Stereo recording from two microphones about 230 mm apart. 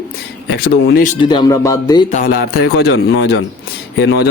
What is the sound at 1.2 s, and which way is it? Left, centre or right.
Speech, centre.